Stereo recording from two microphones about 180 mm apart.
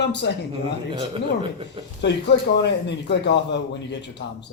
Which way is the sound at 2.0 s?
70° left (ahead or behind).